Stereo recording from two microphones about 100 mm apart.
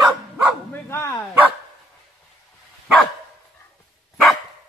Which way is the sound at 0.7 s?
25° left (ahead or behind).